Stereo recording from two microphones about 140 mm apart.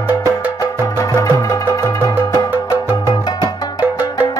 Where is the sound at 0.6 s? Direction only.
25° left (ahead or behind).